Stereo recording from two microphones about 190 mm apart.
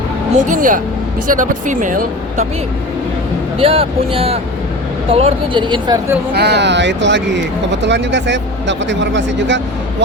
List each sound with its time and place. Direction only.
0.3 s speech: 40° right (ahead or behind)
3.6 s speech: 30° right (ahead or behind)
6.3 s speech: 60° right (ahead or behind)